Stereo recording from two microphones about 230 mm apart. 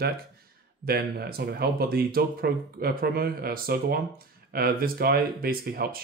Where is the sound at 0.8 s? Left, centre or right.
Right.